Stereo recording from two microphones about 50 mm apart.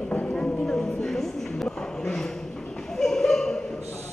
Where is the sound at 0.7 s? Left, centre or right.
Centre.